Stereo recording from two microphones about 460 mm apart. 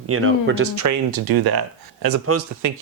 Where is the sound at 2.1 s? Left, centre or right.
Right.